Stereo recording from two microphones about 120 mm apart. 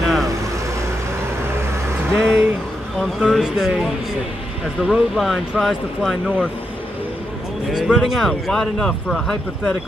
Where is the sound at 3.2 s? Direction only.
5° right (ahead or behind).